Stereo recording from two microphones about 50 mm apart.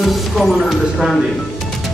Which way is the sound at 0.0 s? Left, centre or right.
Centre.